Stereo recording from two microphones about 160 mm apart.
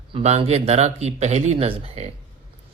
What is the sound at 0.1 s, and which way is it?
Speech, 40° right (ahead or behind).